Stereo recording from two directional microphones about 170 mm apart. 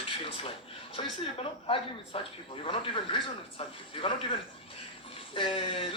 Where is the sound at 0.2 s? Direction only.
35° left (ahead or behind).